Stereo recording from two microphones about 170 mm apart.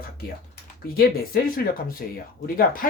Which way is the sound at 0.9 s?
60° left (ahead or behind).